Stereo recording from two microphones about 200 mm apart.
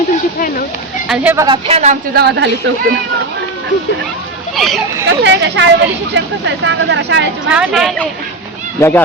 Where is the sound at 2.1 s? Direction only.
55° right (ahead or behind).